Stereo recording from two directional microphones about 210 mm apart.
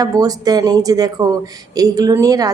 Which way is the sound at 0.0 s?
20° right (ahead or behind).